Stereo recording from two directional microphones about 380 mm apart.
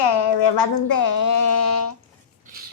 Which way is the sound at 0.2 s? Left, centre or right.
Left.